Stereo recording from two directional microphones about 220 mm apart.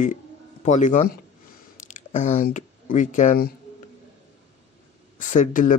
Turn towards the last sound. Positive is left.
turn(degrees=35)  # may be behind; listen again after turning